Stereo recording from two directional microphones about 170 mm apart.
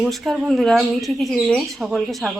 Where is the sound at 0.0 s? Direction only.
Centre (ahead or behind).